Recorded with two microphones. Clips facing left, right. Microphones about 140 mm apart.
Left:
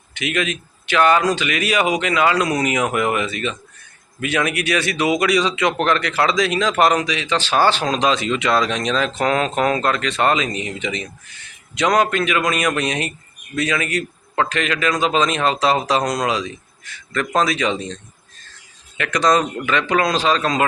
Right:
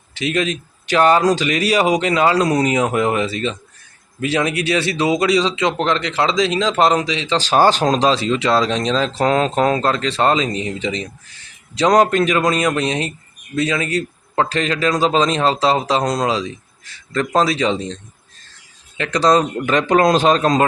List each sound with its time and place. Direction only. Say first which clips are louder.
0.1 s speech: right 3 dB; 35° right (ahead or behind)